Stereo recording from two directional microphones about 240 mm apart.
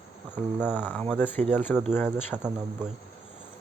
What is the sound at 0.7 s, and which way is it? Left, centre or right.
Speech, centre.